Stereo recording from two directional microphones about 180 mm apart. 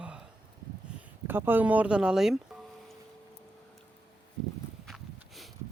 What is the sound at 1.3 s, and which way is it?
Speech, 10° right (ahead or behind).